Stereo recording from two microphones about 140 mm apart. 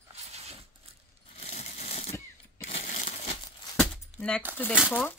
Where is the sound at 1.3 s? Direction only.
50° left (ahead or behind).